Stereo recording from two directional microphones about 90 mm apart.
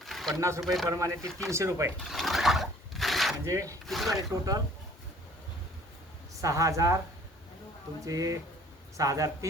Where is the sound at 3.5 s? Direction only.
35° right (ahead or behind).